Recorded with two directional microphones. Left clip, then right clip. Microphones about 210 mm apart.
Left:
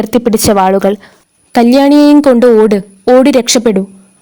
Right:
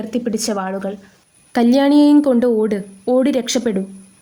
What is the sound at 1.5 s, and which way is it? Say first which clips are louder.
A woman's voice: left 7 dB; 35° left (ahead or behind).